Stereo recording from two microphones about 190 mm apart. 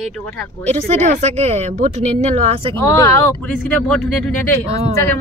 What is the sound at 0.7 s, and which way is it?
Speech, 35° right (ahead or behind).